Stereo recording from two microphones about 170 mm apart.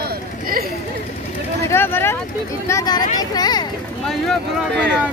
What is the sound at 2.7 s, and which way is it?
Speech, 25° left (ahead or behind).